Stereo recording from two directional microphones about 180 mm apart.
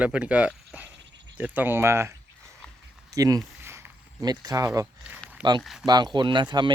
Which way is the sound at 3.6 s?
15° right (ahead or behind).